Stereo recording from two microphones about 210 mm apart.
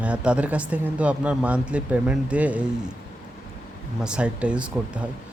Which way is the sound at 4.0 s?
5° right (ahead or behind).